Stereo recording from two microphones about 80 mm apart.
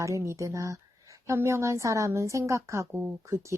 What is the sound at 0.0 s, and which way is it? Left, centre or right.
A woman's voice, right.